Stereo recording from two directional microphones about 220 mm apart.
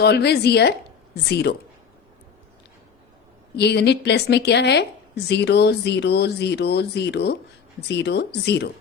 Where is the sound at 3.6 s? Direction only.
50° left (ahead or behind).